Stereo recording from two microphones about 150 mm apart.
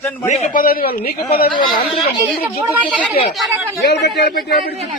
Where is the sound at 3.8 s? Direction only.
90° left.